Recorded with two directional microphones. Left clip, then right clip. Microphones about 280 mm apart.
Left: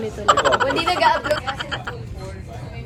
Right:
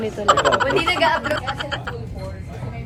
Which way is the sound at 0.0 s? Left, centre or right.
Centre.